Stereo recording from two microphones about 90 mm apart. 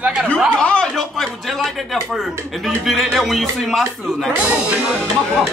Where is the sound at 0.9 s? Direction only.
Centre (ahead or behind).